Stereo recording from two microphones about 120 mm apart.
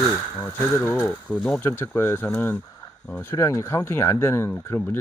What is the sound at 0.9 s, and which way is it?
Speech, 15° left (ahead or behind).